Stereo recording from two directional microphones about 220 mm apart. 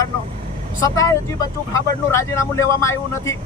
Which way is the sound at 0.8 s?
15° left (ahead or behind).